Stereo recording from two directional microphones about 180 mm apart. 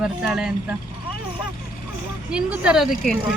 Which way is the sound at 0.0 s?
5° right (ahead or behind).